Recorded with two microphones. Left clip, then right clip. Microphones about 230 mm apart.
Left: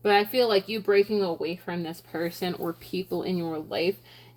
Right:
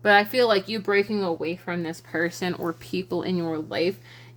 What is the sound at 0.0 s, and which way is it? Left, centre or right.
Speech, right.